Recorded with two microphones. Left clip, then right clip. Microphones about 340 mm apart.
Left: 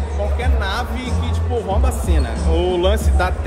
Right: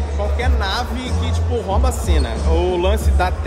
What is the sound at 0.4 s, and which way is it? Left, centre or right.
Speech, centre.